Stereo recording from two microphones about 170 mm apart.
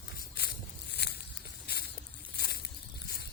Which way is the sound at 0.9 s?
75° left (ahead or behind).